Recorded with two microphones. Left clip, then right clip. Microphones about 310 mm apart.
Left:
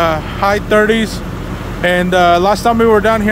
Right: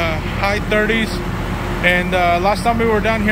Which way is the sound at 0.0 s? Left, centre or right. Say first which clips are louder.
Left 6 dB; centre.